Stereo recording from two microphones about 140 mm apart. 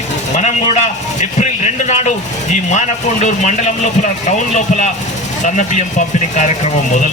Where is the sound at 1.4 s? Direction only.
55° left (ahead or behind).